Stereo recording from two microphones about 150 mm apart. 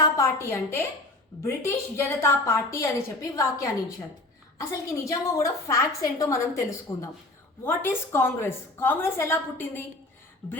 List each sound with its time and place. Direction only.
0.2 s a woman's voice: 15° left (ahead or behind)